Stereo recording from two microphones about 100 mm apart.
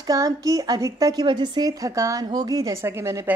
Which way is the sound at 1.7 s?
35° right (ahead or behind).